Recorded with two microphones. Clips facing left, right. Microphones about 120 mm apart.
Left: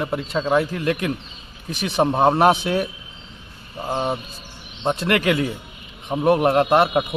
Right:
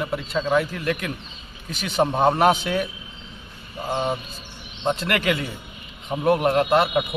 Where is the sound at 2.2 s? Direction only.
30° left (ahead or behind).